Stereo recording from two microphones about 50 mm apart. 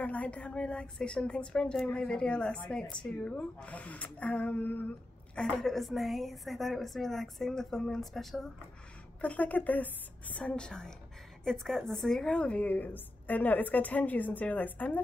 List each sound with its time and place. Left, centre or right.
0.0 s speech: left
5.3 s a woman's voice: centre
9.2 s a woman's voice: left
10.5 s a woman's voice: centre; by 15.0 s left